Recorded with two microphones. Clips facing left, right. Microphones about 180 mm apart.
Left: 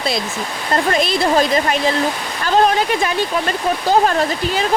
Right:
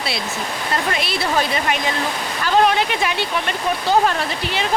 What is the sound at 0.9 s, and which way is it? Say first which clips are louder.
Speech: left 6 dB; 40° left (ahead or behind).